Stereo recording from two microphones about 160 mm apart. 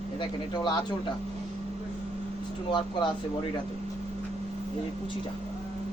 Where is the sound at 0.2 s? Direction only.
30° left (ahead or behind).